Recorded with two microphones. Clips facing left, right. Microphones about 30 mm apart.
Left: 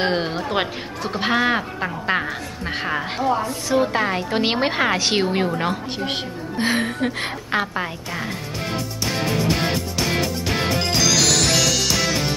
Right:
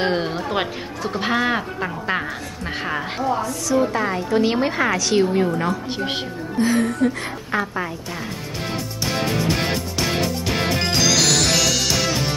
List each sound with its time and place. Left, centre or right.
0.0 s speech: centre
3.4 s speech: left
5.9 s speech: centre
6.6 s speech: left
10.8 s music: centre